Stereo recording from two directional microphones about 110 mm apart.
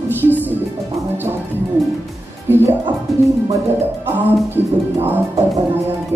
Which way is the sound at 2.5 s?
20° right (ahead or behind).